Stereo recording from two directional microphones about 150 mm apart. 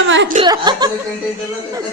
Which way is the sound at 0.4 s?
30° right (ahead or behind).